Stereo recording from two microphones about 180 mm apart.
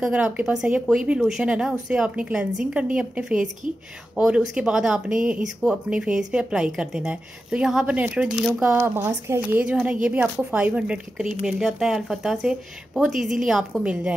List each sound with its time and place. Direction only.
0.0 s speech: 5° right (ahead or behind)